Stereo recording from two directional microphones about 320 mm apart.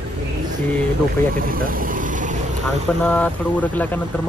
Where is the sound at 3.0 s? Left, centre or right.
Centre.